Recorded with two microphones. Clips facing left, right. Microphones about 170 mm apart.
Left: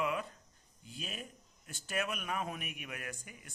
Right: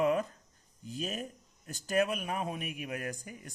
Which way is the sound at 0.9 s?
40° right (ahead or behind).